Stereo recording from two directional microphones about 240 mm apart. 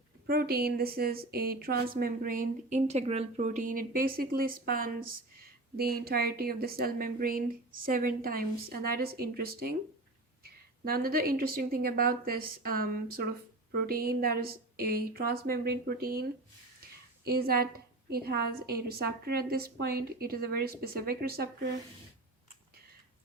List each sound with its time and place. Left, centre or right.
0.3 s a woman's voice: right
17.2 s a woman's voice: right